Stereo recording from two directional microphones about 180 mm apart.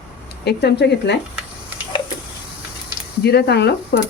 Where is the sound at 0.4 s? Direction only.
70° left (ahead or behind).